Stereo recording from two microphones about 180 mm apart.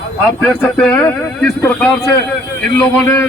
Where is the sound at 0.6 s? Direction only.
5° left (ahead or behind).